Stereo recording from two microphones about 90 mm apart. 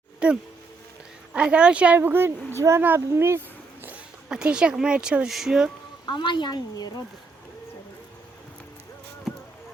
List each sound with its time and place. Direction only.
0.2 s speech: 10° right (ahead or behind)
2.0 s speech: 25° right (ahead or behind)
2.8 s a sound: 25° right (ahead or behind)
4.3 s speech: 10° right (ahead or behind)
6.1 s a woman's voice: 60° left (ahead or behind)
9.3 s insect: centre (ahead or behind)